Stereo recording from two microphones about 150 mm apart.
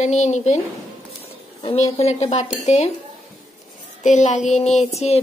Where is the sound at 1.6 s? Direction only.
40° left (ahead or behind).